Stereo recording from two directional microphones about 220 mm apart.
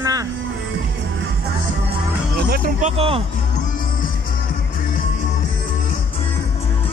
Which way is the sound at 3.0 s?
25° right (ahead or behind).